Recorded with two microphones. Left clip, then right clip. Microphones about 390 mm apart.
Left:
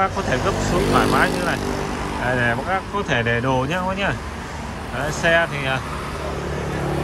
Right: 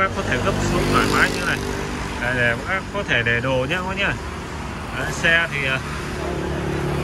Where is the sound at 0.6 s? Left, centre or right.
Left.